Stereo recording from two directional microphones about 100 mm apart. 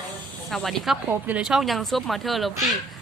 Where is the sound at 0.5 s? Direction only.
Centre (ahead or behind).